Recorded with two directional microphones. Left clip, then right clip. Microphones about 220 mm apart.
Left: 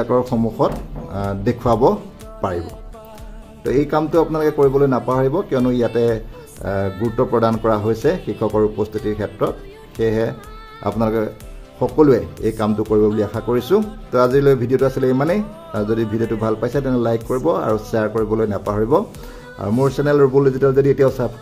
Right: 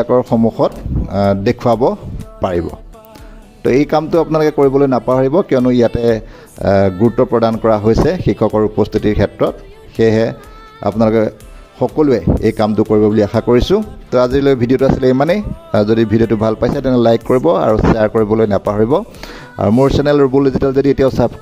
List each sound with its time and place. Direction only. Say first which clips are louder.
0.3 s speech: right 5 dB; 30° right (ahead or behind)
3.6 s speech: right 5 dB; 35° right (ahead or behind)